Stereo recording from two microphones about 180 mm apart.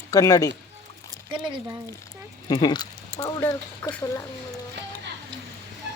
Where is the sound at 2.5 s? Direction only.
25° left (ahead or behind).